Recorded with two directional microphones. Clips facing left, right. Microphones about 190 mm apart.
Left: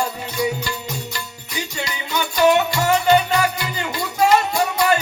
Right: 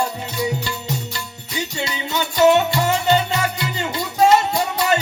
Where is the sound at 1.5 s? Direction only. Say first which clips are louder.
Right 2 dB; 25° right (ahead or behind).